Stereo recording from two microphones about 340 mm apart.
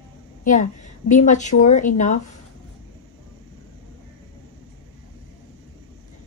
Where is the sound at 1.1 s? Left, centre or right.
Left.